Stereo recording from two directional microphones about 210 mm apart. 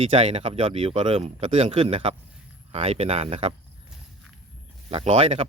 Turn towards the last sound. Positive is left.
turn(degrees=-30)  # may be behind; listen again after turning